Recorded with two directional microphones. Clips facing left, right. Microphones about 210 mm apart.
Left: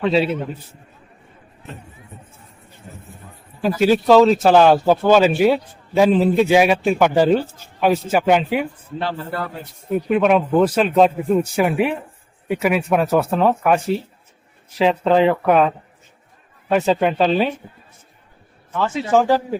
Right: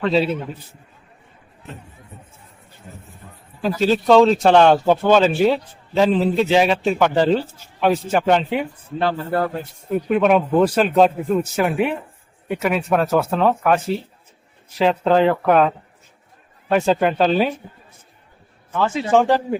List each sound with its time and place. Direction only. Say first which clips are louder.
0.0 s speech: left 1 dB; centre (ahead or behind)
3.6 s speech: left 2 dB; 10° left (ahead or behind)
9.0 s a man's voice: right 6 dB; 45° right (ahead or behind)
9.9 s speech: even; centre (ahead or behind)
18.8 s speech: even; centre (ahead or behind)